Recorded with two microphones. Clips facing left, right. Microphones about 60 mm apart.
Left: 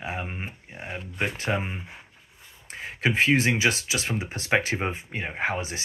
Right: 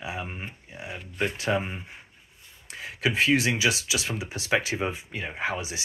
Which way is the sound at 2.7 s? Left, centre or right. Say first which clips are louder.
Left 2 dB; left.